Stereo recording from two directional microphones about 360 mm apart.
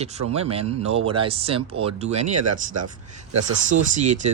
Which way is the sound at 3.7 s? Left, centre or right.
Centre.